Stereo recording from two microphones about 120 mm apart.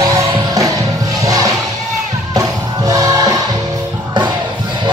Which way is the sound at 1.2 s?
30° right (ahead or behind).